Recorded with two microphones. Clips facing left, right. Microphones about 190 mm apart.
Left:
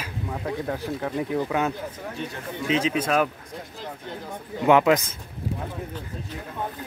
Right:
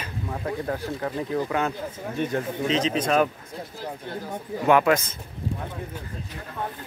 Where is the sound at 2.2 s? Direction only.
55° right (ahead or behind).